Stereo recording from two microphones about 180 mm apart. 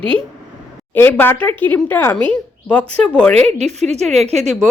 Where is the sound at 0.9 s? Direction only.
10° left (ahead or behind).